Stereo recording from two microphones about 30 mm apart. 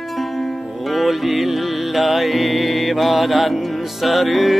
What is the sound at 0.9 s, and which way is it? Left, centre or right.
Music, centre.